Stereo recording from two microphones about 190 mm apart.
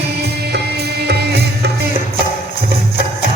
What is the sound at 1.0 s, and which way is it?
Music, 60° right (ahead or behind).